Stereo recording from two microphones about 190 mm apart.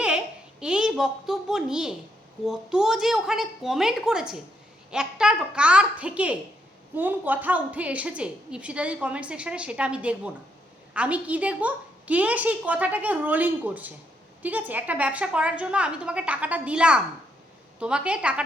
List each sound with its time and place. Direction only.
0.6 s a child's voice: 5° right (ahead or behind)